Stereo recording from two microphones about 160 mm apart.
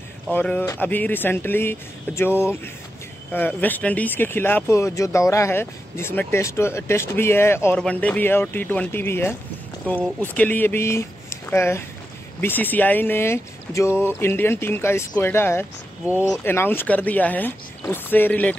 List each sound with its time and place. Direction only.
0.3 s speech: 10° left (ahead or behind)